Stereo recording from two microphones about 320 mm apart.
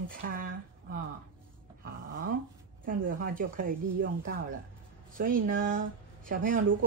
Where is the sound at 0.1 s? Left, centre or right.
Right.